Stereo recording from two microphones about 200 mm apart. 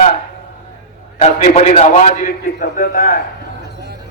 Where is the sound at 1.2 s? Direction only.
35° left (ahead or behind).